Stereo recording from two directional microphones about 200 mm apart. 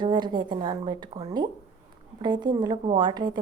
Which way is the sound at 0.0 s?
20° right (ahead or behind).